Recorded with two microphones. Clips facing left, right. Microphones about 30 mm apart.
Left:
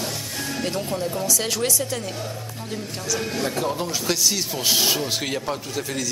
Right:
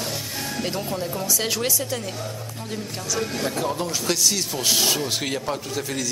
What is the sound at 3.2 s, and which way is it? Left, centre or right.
Speech, centre.